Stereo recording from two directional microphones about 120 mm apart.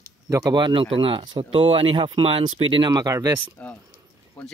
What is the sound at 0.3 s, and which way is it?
Speech, 25° right (ahead or behind).